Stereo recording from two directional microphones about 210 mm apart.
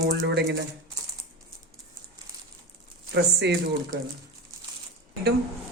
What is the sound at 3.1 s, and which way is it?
Speech, 55° right (ahead or behind).